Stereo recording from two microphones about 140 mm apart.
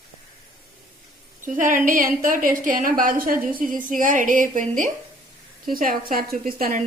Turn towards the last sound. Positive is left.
turn(degrees=-90)